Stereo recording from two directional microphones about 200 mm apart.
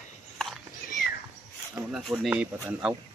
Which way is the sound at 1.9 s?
5° right (ahead or behind).